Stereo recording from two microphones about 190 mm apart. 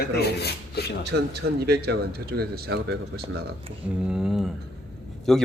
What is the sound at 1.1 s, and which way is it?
Speech, 55° right (ahead or behind).